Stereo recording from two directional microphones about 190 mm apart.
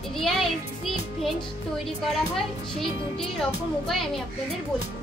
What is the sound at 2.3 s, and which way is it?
A child's voice, centre (ahead or behind).